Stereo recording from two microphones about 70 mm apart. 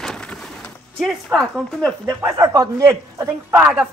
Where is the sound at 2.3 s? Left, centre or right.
Right.